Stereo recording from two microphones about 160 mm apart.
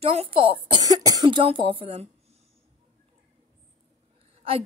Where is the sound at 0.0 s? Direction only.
35° right (ahead or behind).